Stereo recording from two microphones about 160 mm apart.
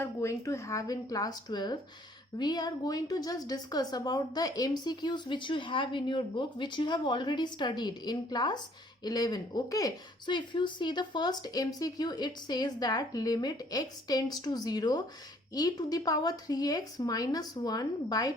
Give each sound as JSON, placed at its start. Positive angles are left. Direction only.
{"t": 0.0, "sound": "speech", "side_deg": 20}